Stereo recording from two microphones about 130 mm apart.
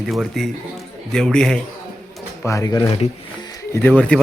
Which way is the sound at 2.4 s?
25° left (ahead or behind).